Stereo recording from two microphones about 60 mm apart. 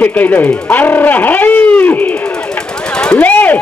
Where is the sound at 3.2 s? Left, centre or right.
Left.